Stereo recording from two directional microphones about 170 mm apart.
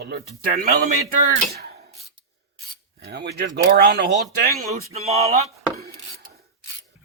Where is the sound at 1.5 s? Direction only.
70° right (ahead or behind).